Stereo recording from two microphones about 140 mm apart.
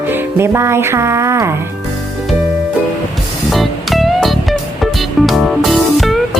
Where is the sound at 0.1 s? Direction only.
20° right (ahead or behind).